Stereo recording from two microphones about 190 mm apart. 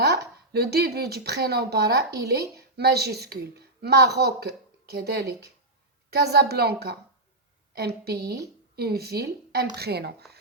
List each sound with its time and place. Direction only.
0.0 s a woman's voice: 60° right (ahead or behind)